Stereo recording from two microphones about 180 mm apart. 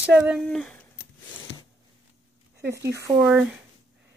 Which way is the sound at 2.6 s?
15° right (ahead or behind).